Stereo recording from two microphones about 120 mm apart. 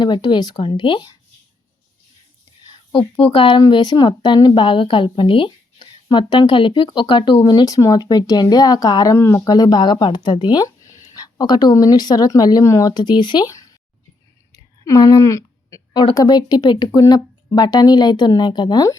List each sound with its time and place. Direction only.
0.0 s a woman's voice: 40° left (ahead or behind)
3.2 s speech: 55° left (ahead or behind)
3.7 s a woman's voice: 35° left (ahead or behind)
14.5 s a sound: 30° left (ahead or behind)
16.1 s a woman's voice: 35° left (ahead or behind)